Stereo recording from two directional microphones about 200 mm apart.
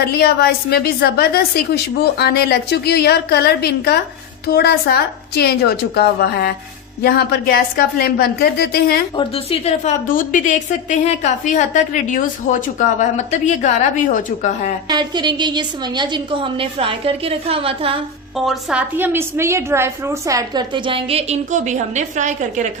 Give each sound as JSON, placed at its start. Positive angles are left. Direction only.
{"t": 0.0, "sound": "a woman's voice", "side_deg": 55}
{"t": 9.1, "sound": "a woman's voice", "side_deg": 30}
{"t": 14.8, "sound": "a woman's voice", "side_deg": -20}
{"t": 18.3, "sound": "a woman's voice", "side_deg": -5}